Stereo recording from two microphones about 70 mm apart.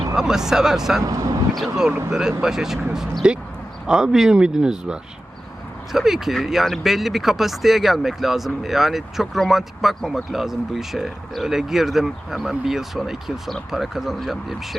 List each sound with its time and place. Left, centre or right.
0.2 s speech: centre
1.0 s speech: right
1.5 s speech: centre